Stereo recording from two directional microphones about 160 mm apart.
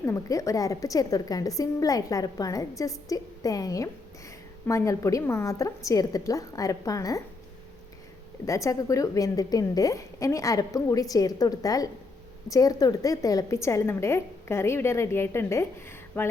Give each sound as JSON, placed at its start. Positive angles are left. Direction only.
{"t": 0.0, "sound": "a woman's voice", "side_deg": 20}
{"t": 8.4, "sound": "a woman's voice", "side_deg": 20}